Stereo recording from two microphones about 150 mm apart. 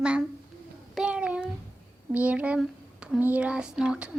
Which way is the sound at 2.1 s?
10° right (ahead or behind).